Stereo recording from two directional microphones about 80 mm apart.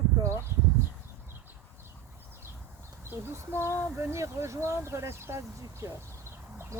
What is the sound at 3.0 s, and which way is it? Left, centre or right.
Speech, right.